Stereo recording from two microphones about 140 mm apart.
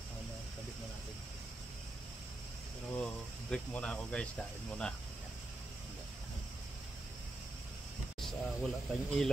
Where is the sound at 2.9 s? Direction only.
10° left (ahead or behind).